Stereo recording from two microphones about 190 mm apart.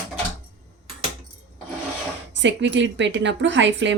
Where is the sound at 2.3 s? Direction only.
70° right (ahead or behind).